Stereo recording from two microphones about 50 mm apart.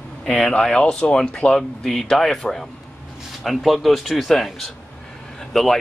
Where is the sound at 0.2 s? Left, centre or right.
Centre.